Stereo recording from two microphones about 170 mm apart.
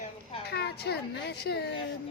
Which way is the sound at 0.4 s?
70° left (ahead or behind).